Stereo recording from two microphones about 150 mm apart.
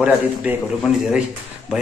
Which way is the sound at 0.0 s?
5° right (ahead or behind).